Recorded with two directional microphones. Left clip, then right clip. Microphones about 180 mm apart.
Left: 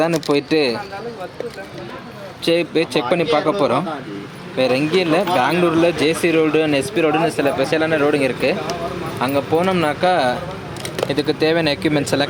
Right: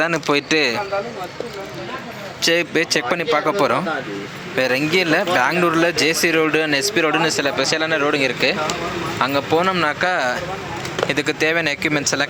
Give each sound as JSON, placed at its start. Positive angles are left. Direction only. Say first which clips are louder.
{"t": 0.0, "sound": "speech", "louder": "left 1 dB", "side_deg": 10}
{"t": 2.4, "sound": "speech", "louder": "even", "side_deg": 5}
{"t": 9.6, "sound": "speech", "louder": "even", "side_deg": 10}